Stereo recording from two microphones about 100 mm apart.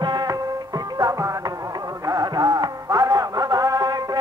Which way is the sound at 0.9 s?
35° right (ahead or behind).